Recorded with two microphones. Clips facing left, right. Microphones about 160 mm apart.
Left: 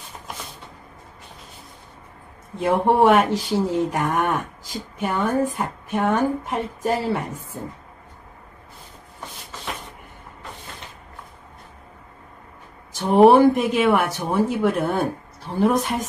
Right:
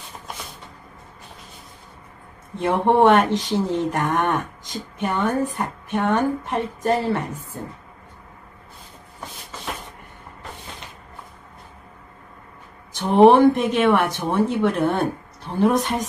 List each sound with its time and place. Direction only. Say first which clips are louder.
2.6 s a woman's voice: right 1 dB; centre (ahead or behind)
12.9 s a woman's voice: even; 5° left (ahead or behind)